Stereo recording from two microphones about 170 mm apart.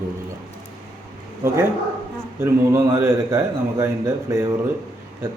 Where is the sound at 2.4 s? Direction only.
15° right (ahead or behind).